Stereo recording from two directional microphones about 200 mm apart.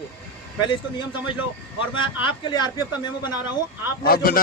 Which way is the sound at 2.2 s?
20° left (ahead or behind).